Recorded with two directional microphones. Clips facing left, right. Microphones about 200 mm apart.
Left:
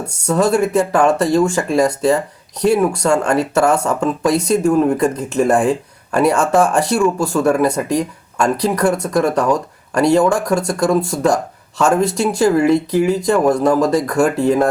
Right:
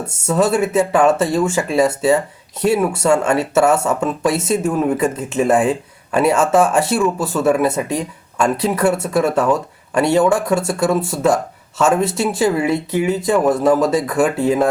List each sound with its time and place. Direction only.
0.3 s speech: 5° right (ahead or behind)